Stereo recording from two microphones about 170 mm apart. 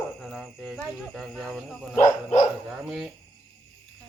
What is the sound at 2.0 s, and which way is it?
Speech, 45° left (ahead or behind).